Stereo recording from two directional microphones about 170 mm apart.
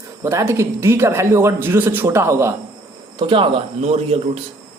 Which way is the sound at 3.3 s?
30° right (ahead or behind).